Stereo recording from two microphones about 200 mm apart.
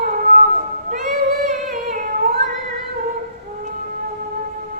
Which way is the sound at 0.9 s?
45° right (ahead or behind).